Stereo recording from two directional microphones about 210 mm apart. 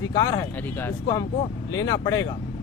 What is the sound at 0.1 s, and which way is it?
Speech, 20° left (ahead or behind).